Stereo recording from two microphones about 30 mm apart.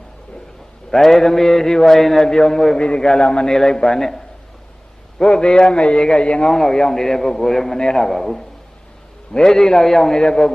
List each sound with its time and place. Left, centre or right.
0.9 s a man's voice: centre
2.7 s a man's voice: left
3.4 s a man's voice: left
5.2 s a man's voice: left
6.4 s a man's voice: centre
10.2 s a man's voice: left